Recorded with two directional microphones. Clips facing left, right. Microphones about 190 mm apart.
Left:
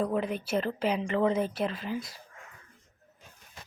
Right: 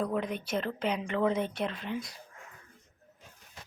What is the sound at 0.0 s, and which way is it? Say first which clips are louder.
Speech: left 2 dB; 5° left (ahead or behind).